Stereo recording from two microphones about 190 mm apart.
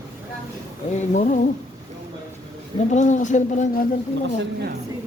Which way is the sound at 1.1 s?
45° left (ahead or behind).